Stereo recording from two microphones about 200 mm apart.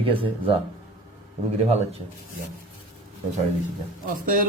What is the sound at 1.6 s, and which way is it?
Speech, 30° right (ahead or behind).